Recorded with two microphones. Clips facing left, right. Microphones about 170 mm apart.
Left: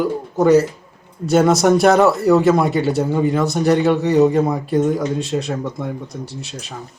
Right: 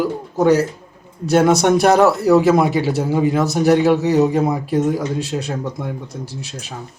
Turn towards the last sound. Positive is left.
turn(degrees=0)  # may be behind; listen again after turning